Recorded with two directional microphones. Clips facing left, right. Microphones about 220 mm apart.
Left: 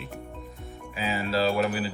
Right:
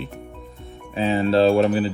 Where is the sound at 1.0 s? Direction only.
30° right (ahead or behind).